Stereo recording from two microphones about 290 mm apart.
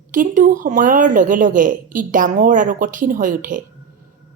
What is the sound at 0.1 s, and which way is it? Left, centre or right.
Speech, right.